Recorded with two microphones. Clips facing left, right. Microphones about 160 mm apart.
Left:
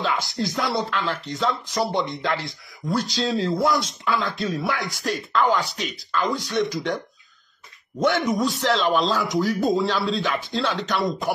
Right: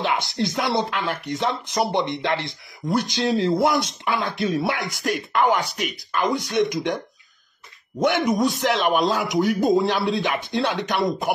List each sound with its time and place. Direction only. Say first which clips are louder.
0.0 s speech: right 2 dB; 20° right (ahead or behind)
8.3 s speech: right 1 dB; 20° right (ahead or behind)